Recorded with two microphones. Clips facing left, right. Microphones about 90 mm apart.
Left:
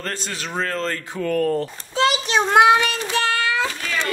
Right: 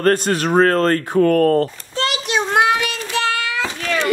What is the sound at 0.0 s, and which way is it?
Speech, 55° right (ahead or behind).